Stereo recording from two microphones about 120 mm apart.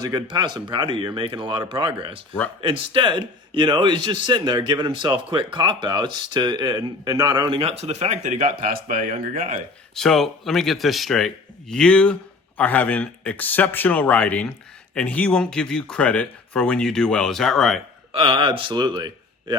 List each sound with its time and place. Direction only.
0.0 s speech: 35° right (ahead or behind)
7.6 s speech: 60° right (ahead or behind); by 9.1 s 90° right
9.9 s speech: 5° left (ahead or behind)
18.1 s speech: 50° right (ahead or behind)